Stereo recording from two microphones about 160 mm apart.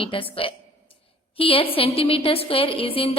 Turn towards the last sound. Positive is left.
turn(degrees=35)  # may be behind; listen again after turning